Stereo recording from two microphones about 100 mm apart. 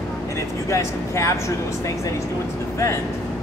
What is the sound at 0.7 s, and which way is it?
Speech, 30° left (ahead or behind).